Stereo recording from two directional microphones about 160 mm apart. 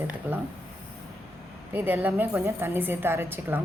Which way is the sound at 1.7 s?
10° right (ahead or behind).